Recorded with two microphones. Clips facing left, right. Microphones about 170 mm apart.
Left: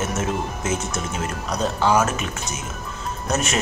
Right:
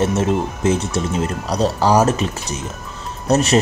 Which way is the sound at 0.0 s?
35° right (ahead or behind).